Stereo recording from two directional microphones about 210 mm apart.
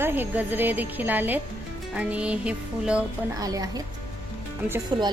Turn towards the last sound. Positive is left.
turn(degrees=-10)  # may be behind; listen again after turning